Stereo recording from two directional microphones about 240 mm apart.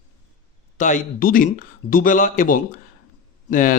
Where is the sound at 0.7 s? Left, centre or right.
Left.